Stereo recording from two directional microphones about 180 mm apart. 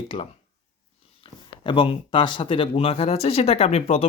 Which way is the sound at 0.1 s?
30° left (ahead or behind).